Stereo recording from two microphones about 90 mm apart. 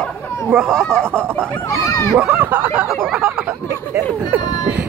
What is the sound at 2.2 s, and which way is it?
Speech, 10° right (ahead or behind).